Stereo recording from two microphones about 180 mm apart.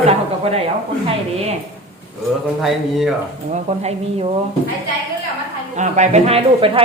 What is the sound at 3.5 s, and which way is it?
Speech, 35° right (ahead or behind).